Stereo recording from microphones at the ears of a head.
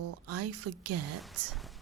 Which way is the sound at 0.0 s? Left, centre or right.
Right.